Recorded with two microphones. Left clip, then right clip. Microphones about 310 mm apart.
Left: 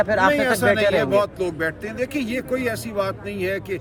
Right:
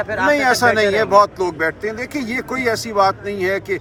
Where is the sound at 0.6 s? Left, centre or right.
Centre.